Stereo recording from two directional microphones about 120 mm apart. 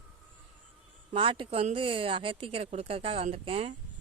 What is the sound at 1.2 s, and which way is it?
Speech, 50° right (ahead or behind).